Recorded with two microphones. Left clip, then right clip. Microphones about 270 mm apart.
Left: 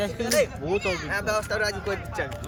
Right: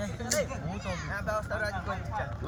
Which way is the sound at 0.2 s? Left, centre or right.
Left.